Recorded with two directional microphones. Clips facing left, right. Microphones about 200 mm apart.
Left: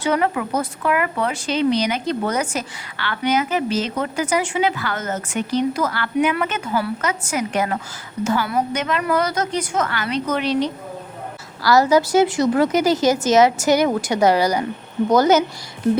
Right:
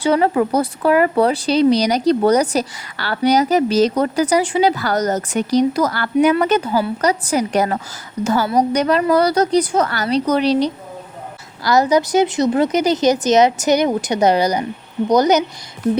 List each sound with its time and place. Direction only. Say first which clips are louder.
0.0 s speech: right 5 dB; 30° right (ahead or behind)
11.6 s a woman's voice: even; 20° right (ahead or behind)